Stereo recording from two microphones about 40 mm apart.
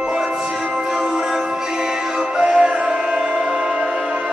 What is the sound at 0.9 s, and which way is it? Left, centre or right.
Music, centre.